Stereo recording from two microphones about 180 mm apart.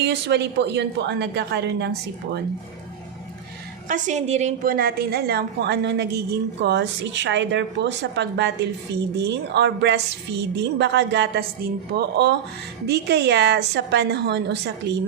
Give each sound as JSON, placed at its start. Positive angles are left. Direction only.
{"t": 0.0, "sound": "a woman's voice", "side_deg": -70}
{"t": 3.8, "sound": "a woman's voice", "side_deg": -45}
{"t": 4.6, "sound": "a woman's voice", "side_deg": -55}